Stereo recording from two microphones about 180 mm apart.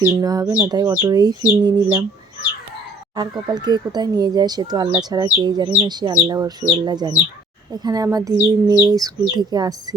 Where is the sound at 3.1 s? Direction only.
25° right (ahead or behind).